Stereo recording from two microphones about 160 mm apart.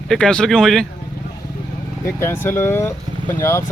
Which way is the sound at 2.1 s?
15° left (ahead or behind).